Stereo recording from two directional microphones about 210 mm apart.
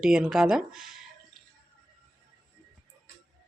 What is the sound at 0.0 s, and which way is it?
Speech, 5° right (ahead or behind).